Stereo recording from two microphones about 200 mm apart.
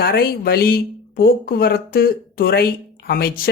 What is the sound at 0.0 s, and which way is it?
A man's voice, 50° left (ahead or behind).